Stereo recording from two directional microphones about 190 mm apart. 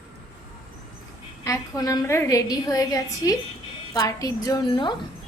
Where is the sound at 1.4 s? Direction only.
15° left (ahead or behind).